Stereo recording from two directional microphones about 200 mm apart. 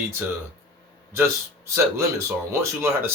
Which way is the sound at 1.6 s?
15° right (ahead or behind).